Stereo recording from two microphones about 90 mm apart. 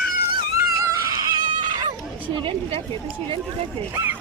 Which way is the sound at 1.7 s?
50° right (ahead or behind).